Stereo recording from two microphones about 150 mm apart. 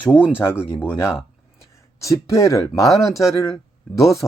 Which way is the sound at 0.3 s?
15° left (ahead or behind).